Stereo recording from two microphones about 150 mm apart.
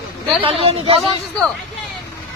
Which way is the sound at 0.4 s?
40° right (ahead or behind).